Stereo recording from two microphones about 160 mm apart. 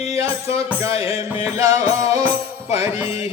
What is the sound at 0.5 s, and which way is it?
Speech, 40° left (ahead or behind).